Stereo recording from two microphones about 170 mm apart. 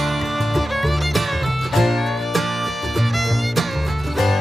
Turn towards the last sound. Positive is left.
turn(degrees=0)  # may be behind; listen again after turning